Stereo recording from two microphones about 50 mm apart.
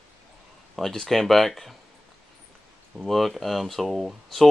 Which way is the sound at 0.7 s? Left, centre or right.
Centre.